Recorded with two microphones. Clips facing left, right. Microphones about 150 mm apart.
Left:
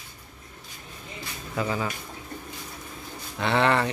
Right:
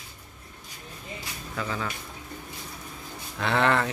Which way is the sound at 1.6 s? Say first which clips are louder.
Left 4 dB; 15° left (ahead or behind).